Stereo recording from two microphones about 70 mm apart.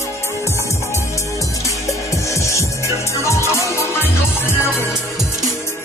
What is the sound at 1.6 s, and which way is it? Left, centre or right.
Music, left.